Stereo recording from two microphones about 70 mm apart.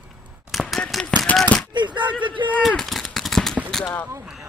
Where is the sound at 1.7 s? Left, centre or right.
Right.